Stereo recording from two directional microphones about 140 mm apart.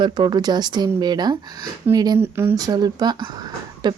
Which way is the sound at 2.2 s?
15° right (ahead or behind).